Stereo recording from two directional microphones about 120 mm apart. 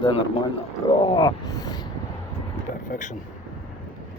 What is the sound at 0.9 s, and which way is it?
Speech, 45° left (ahead or behind).